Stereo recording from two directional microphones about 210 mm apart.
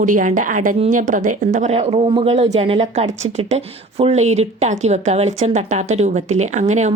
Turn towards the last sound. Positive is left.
turn(degrees=-35)  # may be behind; listen again after turning